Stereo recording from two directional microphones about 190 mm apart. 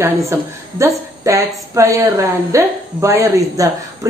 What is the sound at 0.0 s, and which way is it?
A woman's voice, 15° right (ahead or behind).